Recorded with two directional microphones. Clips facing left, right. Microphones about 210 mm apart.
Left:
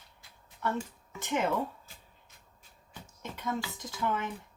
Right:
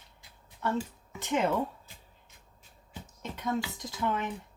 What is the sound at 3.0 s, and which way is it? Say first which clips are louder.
Speech: right 2 dB; 20° right (ahead or behind).